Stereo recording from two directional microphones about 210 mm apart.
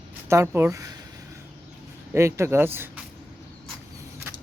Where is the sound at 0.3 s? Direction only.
10° right (ahead or behind).